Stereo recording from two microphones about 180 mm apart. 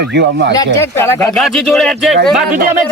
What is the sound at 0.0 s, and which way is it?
Speech, 70° right (ahead or behind).